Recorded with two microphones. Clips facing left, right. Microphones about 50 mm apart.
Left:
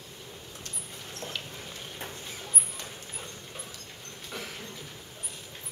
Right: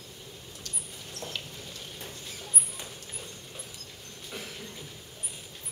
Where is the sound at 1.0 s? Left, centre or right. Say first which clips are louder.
Left 1 dB; left.